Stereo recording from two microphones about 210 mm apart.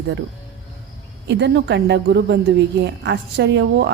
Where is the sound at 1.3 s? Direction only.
55° right (ahead or behind).